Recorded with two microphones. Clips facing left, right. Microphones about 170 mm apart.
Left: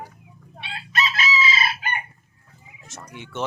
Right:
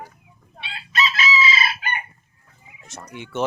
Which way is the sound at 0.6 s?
50° left (ahead or behind).